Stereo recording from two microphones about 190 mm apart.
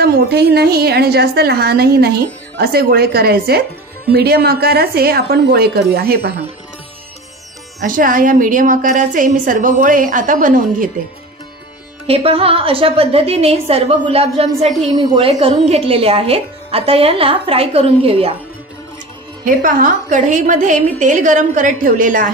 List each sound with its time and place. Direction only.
0.0 s a woman's voice: 55° right (ahead or behind)
7.8 s a woman's voice: 45° right (ahead or behind)
12.1 s a woman's voice: 30° right (ahead or behind)
19.4 s a woman's voice: 45° right (ahead or behind)